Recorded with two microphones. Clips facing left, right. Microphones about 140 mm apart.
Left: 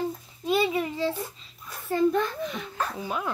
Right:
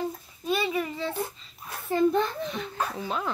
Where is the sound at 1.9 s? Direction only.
20° right (ahead or behind).